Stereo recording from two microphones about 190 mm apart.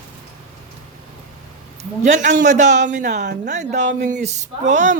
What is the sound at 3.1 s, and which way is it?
Speech, 60° right (ahead or behind).